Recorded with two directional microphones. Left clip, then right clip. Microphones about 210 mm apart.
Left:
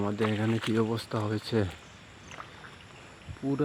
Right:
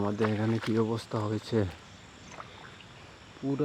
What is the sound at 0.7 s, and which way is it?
Speech, 5° left (ahead or behind).